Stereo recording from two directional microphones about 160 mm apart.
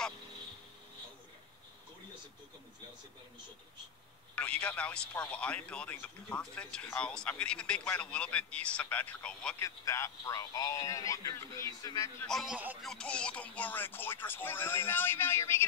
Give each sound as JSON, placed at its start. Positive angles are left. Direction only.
{"t": 4.4, "sound": "speech", "side_deg": 10}
{"t": 9.6, "sound": "a man's voice", "side_deg": 20}
{"t": 12.2, "sound": "a man's voice", "side_deg": 0}
{"t": 12.8, "sound": "speech", "side_deg": 5}